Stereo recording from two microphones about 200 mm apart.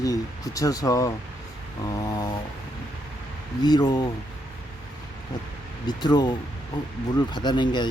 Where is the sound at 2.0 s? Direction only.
20° left (ahead or behind).